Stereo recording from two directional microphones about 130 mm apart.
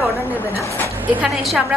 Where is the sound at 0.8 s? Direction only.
15° right (ahead or behind).